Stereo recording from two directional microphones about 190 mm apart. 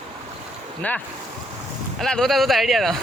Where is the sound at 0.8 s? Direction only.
10° left (ahead or behind).